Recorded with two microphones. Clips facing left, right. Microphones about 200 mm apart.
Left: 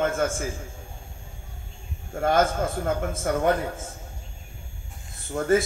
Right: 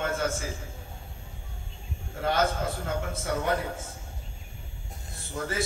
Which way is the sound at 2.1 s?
50° left (ahead or behind).